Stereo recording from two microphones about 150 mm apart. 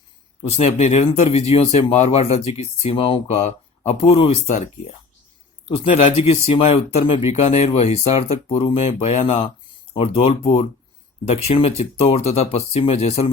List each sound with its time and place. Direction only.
0.4 s speech: 45° left (ahead or behind)